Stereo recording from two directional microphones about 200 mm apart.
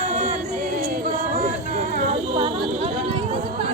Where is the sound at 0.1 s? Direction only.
35° right (ahead or behind).